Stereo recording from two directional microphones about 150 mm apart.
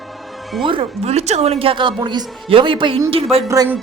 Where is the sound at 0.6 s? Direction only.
35° right (ahead or behind).